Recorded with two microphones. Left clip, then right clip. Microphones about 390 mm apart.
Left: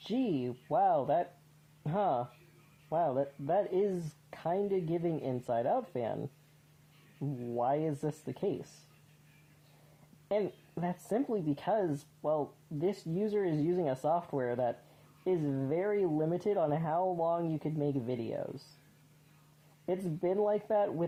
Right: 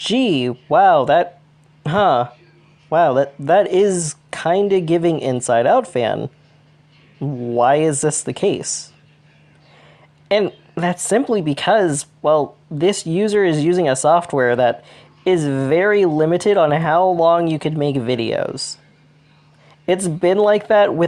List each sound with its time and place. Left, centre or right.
0.1 s speech: centre
5.5 s speech: left
10.2 s speech: centre
19.8 s speech: centre